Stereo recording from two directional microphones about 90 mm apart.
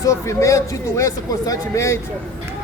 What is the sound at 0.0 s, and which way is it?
Speech, 35° left (ahead or behind).